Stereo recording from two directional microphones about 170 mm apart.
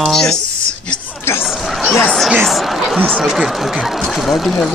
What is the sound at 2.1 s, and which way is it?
Speech, centre (ahead or behind).